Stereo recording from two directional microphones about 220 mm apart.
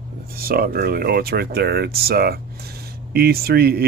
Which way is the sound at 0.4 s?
45° right (ahead or behind).